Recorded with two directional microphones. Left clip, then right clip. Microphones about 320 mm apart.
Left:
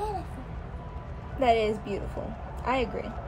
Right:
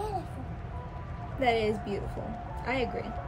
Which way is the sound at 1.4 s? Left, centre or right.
Centre.